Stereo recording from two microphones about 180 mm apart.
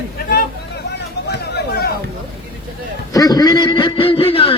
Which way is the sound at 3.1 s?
20° left (ahead or behind).